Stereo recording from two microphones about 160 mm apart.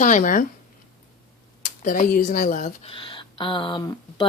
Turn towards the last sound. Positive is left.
turn(degrees=25)  # may be behind; listen again after turning